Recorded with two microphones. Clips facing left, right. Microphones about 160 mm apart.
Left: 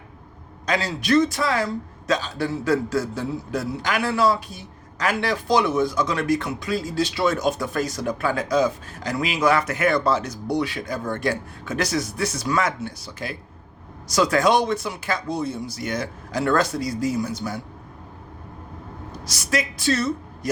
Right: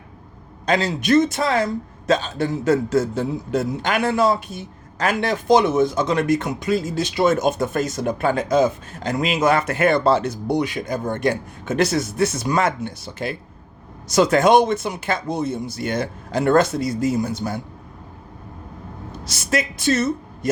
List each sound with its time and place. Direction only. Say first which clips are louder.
0.6 s a man's voice: right 4 dB; 25° right (ahead or behind)
9.6 s speech: right 3 dB; 55° right (ahead or behind)
9.9 s a man's voice: right 4 dB; 30° right (ahead or behind)
17.4 s a man's voice: right 3 dB; 40° right (ahead or behind)
19.1 s a woman's voice: right 2 dB; 25° right (ahead or behind)